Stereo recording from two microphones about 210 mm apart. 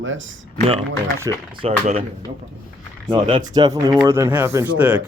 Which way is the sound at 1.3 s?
20° right (ahead or behind).